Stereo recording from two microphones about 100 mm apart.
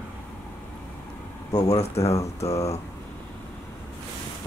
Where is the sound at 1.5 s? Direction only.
90° left.